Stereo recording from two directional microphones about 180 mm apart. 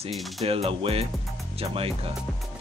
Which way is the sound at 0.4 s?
35° right (ahead or behind).